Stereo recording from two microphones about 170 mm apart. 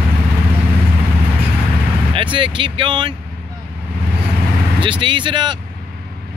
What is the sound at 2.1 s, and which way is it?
Music, 30° right (ahead or behind).